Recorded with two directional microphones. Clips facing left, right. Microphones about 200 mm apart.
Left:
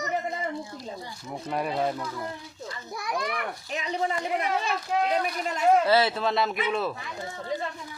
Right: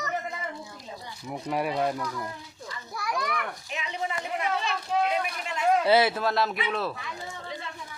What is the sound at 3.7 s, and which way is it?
Speech, 35° left (ahead or behind).